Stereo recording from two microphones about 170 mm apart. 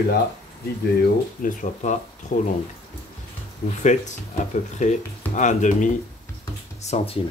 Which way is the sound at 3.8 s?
45° left (ahead or behind).